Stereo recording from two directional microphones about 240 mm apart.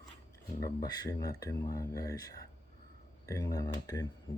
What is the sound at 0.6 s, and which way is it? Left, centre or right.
Speech, centre.